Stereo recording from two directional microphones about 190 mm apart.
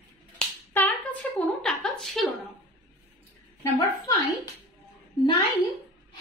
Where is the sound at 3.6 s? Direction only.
20° left (ahead or behind).